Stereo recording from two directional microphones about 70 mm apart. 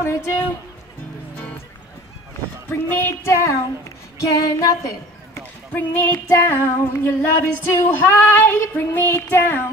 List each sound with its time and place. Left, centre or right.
0.0 s a woman's voice: left
2.7 s female singing: left
4.4 s female singing: left
5.8 s music: left
6.2 s female singing: left